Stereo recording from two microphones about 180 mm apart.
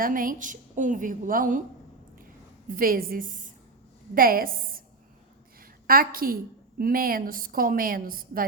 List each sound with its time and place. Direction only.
0.0 s a woman's voice: 50° right (ahead or behind)
2.6 s a woman's voice: 50° right (ahead or behind)